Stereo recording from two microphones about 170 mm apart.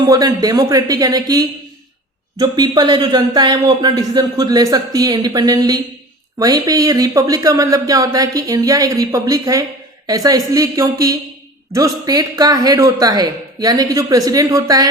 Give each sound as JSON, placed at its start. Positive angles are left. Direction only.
{"t": 0.0, "sound": "speech", "side_deg": -20}